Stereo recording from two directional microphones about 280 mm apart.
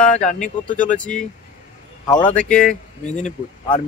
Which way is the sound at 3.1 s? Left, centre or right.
Left.